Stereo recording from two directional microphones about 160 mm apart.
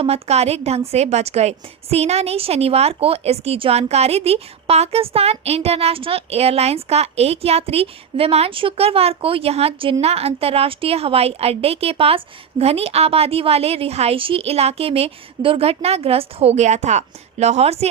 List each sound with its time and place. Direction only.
0.0 s a woman's voice: 40° right (ahead or behind)